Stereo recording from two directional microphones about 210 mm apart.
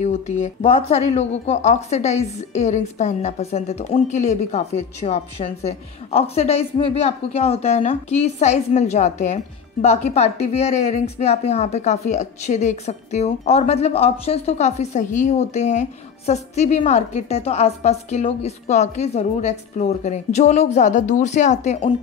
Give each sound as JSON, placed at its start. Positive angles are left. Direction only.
{"t": 0.0, "sound": "speech", "side_deg": 30}